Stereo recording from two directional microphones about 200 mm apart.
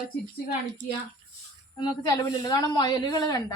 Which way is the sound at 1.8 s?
20° left (ahead or behind).